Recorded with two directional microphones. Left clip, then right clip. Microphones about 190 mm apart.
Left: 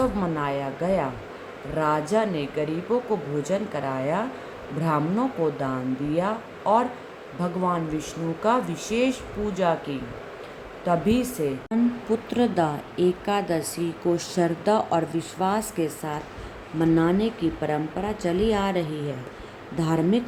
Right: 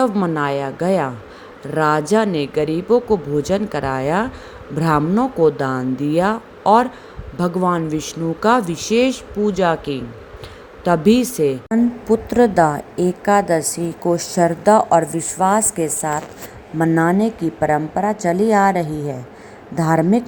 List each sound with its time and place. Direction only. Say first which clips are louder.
0.0 s speech: right 7 dB; 50° right (ahead or behind)
12.0 s a woman's voice: right 13 dB; 30° right (ahead or behind)
16.8 s speech: right 6 dB; 35° right (ahead or behind)